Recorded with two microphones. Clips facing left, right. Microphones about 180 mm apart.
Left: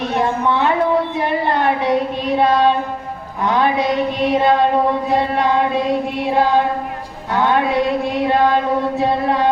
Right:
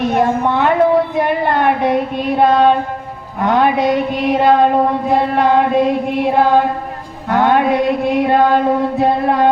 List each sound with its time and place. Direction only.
0.1 s speech: 50° right (ahead or behind)
1.1 s a sound: 50° right (ahead or behind)
2.4 s music: 50° right (ahead or behind)